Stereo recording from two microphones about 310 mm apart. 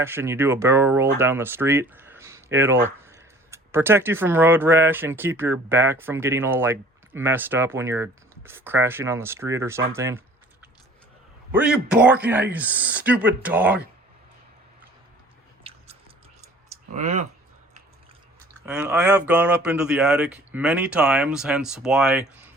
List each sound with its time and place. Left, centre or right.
0.0 s speech: centre
15.6 s chewing: centre
16.9 s speech: right
18.6 s speech: centre